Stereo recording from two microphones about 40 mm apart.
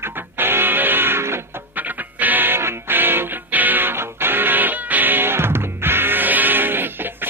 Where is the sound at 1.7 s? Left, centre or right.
Right.